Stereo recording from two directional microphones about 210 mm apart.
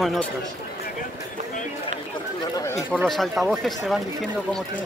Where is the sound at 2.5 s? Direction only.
15° left (ahead or behind).